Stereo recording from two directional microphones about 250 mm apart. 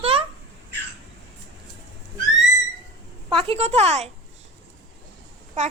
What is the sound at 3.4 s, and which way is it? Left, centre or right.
Speech, right.